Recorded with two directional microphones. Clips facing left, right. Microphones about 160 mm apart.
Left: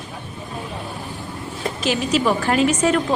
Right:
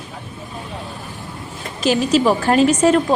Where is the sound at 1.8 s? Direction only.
35° right (ahead or behind).